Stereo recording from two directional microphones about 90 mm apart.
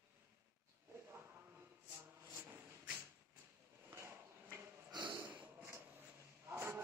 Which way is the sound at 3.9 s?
30° right (ahead or behind).